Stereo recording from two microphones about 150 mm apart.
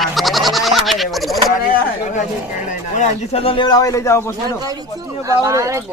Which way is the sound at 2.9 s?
45° left (ahead or behind).